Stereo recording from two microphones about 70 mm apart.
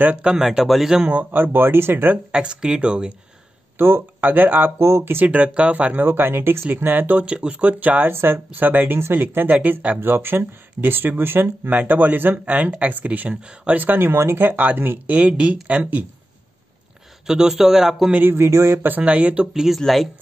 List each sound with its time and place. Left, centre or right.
0.0 s speech: centre
1.1 s speech: right
2.3 s speech: centre
3.7 s speech: right
4.7 s speech: right
5.2 s speech: centre
17.3 s speech: centre
18.1 s speech: right
18.9 s speech: right
19.4 s speech: centre